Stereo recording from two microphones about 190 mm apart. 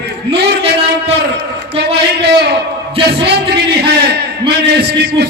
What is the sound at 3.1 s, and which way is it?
A man's voice, 60° right (ahead or behind).